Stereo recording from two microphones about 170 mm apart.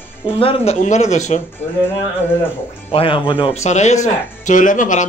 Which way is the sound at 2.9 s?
30° left (ahead or behind).